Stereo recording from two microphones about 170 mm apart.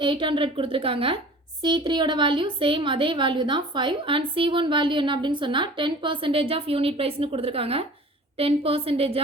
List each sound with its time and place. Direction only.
0.0 s a woman's voice: 30° right (ahead or behind)